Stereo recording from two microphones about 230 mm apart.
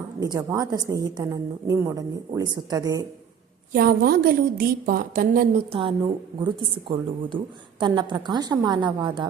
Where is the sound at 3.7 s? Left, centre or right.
Right.